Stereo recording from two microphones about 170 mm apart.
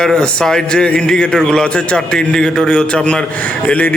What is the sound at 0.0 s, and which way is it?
A man's voice, 5° left (ahead or behind).